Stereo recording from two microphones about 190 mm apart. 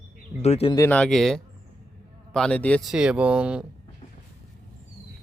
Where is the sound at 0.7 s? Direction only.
10° left (ahead or behind).